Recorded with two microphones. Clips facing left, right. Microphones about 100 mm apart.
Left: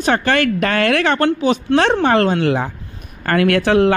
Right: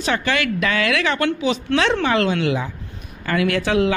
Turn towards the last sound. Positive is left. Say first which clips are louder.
# left 5 dB
turn(degrees=55)  # may be behind; listen again after turning